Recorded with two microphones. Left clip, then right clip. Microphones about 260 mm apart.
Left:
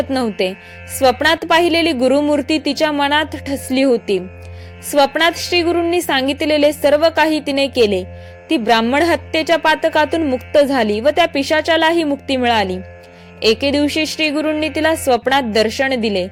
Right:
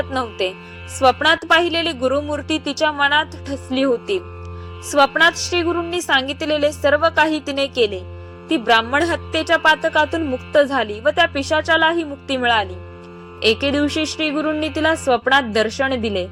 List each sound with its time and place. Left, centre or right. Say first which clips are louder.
0.1 s speech: left 4 dB; left
2.6 s speech: left 5 dB; left
2.8 s speech: even; left